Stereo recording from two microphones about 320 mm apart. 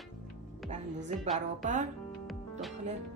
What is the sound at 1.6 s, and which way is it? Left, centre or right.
Speech, right.